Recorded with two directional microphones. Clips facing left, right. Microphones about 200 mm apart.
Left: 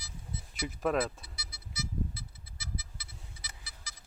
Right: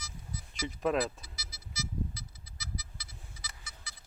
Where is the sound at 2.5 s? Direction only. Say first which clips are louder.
Left 1 dB; 30° left (ahead or behind).